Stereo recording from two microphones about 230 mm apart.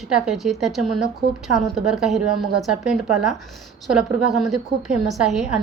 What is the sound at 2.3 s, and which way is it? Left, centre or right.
Speech, right.